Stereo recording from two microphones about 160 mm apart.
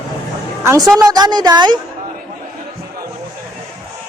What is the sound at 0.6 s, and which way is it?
A woman's voice, 15° right (ahead or behind).